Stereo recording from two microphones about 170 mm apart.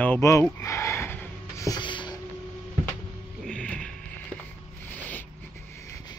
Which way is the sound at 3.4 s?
5° left (ahead or behind).